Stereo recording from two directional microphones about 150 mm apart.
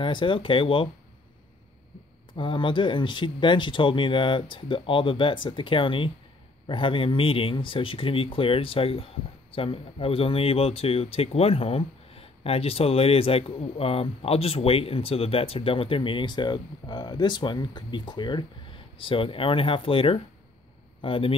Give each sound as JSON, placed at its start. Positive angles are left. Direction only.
{"t": 0.0, "sound": "speech", "side_deg": 35}
{"t": 2.3, "sound": "speech", "side_deg": 35}